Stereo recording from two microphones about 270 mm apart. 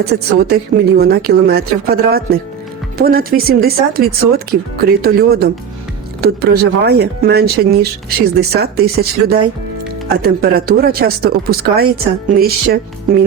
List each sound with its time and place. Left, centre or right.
0.0 s a woman's voice: right